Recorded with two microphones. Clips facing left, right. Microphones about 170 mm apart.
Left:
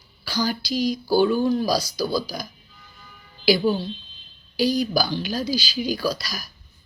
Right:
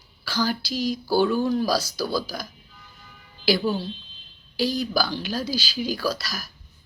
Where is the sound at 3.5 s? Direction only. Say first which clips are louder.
Left 3 dB; 15° left (ahead or behind).